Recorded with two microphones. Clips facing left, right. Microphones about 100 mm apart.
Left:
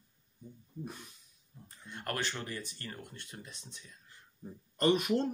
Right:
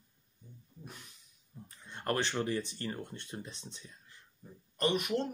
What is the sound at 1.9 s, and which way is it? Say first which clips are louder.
Speech: right 4 dB; 25° right (ahead or behind).